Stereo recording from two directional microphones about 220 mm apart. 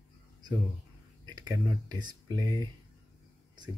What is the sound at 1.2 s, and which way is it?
Speech, 20° right (ahead or behind).